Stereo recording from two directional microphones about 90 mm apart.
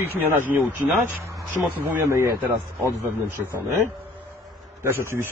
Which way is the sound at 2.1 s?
30° right (ahead or behind).